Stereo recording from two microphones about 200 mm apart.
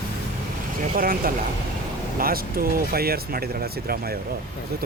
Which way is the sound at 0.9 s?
45° right (ahead or behind).